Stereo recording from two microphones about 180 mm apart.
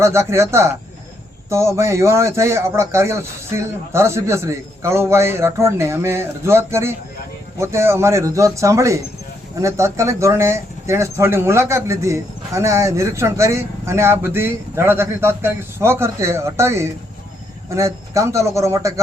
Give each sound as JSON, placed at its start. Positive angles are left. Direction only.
{"t": 0.0, "sound": "speech", "side_deg": -15}